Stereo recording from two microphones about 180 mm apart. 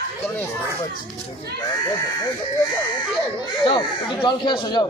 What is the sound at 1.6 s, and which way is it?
Speech, 20° left (ahead or behind).